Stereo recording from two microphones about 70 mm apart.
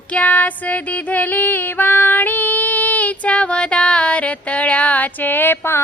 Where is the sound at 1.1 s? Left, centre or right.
Left.